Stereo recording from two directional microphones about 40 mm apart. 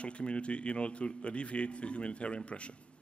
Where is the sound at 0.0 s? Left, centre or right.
Left.